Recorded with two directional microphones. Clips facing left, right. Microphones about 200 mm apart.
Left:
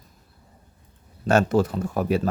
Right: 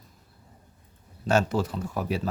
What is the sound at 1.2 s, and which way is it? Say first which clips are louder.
Speech: left 5 dB; 55° left (ahead or behind).